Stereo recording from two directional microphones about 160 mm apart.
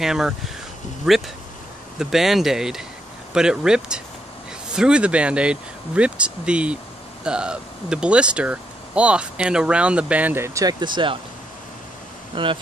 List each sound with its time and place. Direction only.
0.0 s speech: 5° right (ahead or behind); by 11.1 s 30° right (ahead or behind)
12.3 s speech: 30° right (ahead or behind)